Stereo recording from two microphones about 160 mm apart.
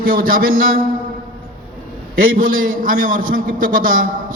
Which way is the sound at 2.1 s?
60° right (ahead or behind).